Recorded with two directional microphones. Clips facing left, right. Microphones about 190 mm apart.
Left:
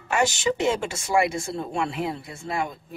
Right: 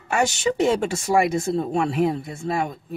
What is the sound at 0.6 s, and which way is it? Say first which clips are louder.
Speech: right 4 dB; 35° right (ahead or behind).